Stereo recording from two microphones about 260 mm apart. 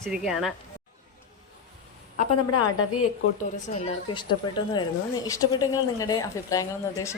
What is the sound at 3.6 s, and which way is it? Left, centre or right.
A woman's voice, left.